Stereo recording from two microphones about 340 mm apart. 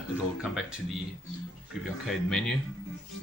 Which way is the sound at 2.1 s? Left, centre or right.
Centre.